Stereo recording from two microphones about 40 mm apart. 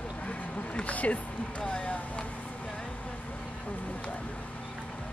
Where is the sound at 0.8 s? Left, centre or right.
Left.